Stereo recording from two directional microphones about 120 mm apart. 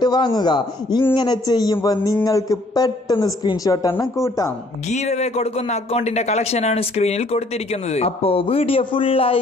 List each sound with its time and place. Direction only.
0.0 s a woman's voice: 35° left (ahead or behind)
4.8 s speech: 70° left (ahead or behind); by 9.4 s 50° left (ahead or behind)